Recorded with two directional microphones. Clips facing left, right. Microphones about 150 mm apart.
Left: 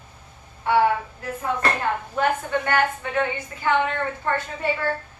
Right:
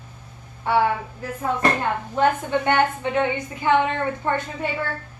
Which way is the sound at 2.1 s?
20° right (ahead or behind).